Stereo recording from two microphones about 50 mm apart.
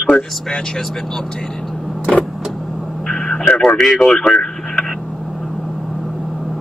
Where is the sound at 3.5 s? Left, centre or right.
Centre.